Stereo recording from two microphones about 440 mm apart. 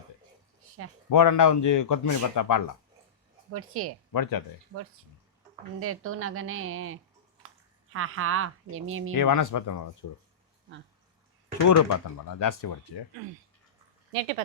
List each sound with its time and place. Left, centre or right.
1.1 s a man's voice: left
3.5 s speech: right
4.1 s a man's voice: left
5.8 s speech: right
9.1 s a man's voice: left
11.6 s a man's voice: left